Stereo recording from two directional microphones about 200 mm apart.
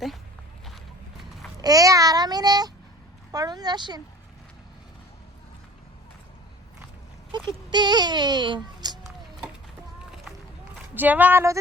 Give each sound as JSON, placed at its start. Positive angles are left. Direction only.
{"t": 1.5, "sound": "speech", "side_deg": -20}
{"t": 7.3, "sound": "speech", "side_deg": -20}
{"t": 10.9, "sound": "speech", "side_deg": -10}